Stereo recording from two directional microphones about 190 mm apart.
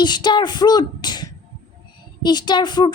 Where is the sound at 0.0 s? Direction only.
25° left (ahead or behind).